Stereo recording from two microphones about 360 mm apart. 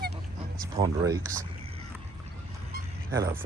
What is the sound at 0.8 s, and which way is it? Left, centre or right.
Speech, centre.